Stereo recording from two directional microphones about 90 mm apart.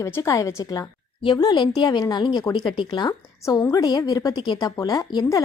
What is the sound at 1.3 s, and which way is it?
A woman's voice, 50° left (ahead or behind).